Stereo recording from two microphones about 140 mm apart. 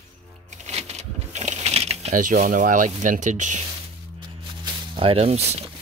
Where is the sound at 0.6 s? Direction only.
50° right (ahead or behind).